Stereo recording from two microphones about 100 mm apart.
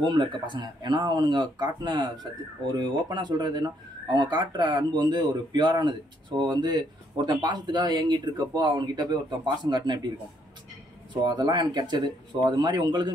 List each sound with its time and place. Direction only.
0.0 s speech: 50° right (ahead or behind)
11.2 s speech: 45° right (ahead or behind)